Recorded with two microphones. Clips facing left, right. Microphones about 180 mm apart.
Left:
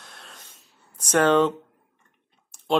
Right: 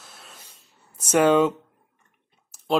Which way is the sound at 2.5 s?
5° right (ahead or behind).